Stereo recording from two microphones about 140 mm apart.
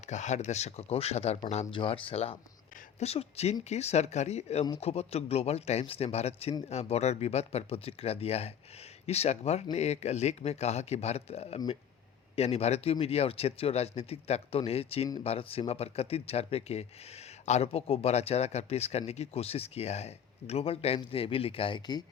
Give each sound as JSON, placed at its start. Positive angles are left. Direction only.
{"t": 0.0, "sound": "speech", "side_deg": 55}
{"t": 1.7, "sound": "speech", "side_deg": 40}